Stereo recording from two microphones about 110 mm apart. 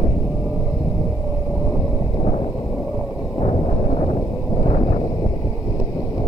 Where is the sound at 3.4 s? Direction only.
60° left (ahead or behind).